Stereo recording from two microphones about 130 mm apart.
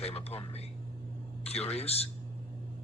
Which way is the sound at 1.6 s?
50° left (ahead or behind).